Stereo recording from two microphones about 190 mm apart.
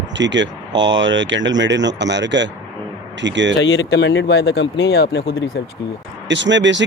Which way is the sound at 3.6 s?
75° left (ahead or behind).